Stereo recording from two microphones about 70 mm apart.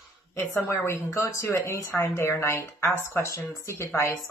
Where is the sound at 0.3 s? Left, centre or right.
Left.